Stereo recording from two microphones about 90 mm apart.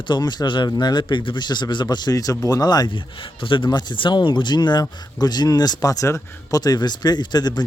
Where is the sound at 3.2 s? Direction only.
70° left (ahead or behind).